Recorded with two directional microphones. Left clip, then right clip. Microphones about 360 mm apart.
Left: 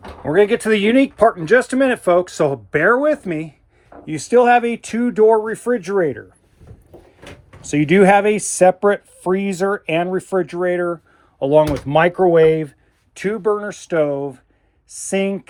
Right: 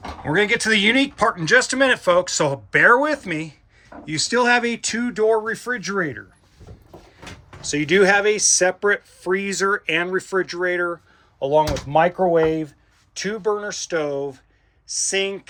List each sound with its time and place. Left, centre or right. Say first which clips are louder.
0.3 s speech: left 4 dB; centre
7.7 s speech: left 4 dB; centre